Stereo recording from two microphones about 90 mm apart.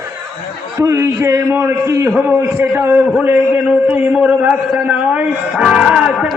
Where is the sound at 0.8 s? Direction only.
35° right (ahead or behind).